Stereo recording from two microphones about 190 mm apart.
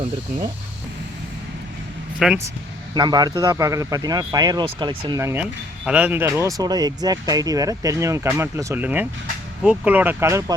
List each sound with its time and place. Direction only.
2.1 s speech: centre (ahead or behind)
2.9 s speech: 20° right (ahead or behind)